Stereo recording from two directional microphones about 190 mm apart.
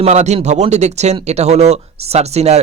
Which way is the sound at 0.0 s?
35° right (ahead or behind).